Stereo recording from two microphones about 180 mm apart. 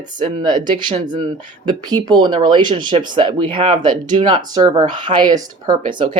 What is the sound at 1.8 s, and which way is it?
Speech, 20° right (ahead or behind).